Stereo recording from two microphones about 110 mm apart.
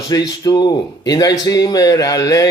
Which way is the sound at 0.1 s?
40° left (ahead or behind).